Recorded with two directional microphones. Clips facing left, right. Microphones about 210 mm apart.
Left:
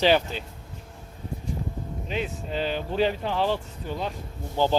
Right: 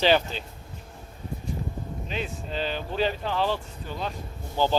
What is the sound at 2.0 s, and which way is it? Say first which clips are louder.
A man's voice: left 4 dB; 15° left (ahead or behind).